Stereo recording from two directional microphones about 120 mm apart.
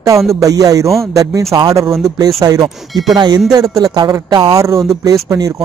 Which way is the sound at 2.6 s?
Centre (ahead or behind).